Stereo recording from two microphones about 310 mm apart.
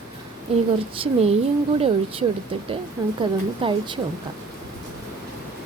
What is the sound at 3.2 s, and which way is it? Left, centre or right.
Speech, centre.